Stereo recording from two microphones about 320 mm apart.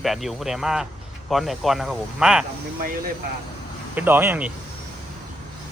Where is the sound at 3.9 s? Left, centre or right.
Centre.